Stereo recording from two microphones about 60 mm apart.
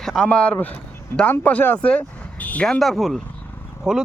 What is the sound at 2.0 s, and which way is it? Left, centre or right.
Vehicle, left.